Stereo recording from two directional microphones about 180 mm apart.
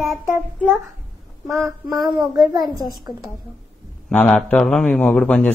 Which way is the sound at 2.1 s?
20° right (ahead or behind).